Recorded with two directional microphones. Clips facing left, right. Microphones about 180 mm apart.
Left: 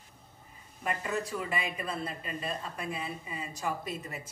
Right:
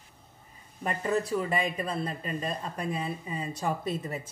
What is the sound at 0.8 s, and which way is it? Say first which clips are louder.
Speech: right 5 dB; 35° right (ahead or behind).